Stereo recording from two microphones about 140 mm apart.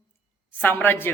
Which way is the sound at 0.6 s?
15° left (ahead or behind).